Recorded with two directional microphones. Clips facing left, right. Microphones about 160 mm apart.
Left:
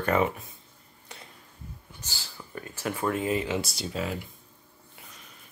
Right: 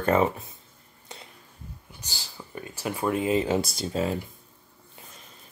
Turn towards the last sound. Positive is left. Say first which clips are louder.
# right 5 dB
turn(degrees=-35)  # may be behind; listen again after turning